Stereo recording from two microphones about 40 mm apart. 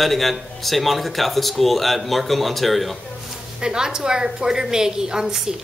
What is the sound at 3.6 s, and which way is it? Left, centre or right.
A woman's voice, centre.